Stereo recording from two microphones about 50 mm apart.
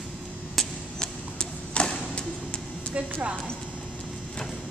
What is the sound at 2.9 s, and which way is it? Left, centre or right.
Music, right.